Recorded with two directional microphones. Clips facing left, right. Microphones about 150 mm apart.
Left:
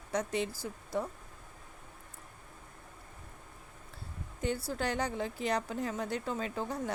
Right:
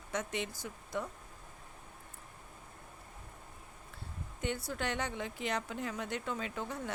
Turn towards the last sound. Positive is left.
turn(degrees=35)  # may be behind; listen again after turning